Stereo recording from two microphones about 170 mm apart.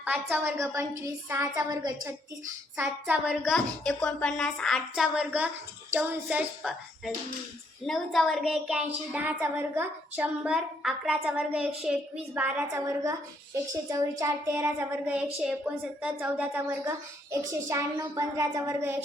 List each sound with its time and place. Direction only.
0.0 s a woman's voice: 10° right (ahead or behind)
2.7 s a woman's voice: 10° right (ahead or behind)
3.2 s a woman's voice: 5° left (ahead or behind); by 18.9 s 15° right (ahead or behind)